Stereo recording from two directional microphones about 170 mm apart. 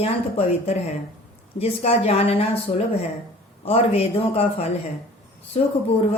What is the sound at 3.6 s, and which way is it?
Speech, 35° left (ahead or behind).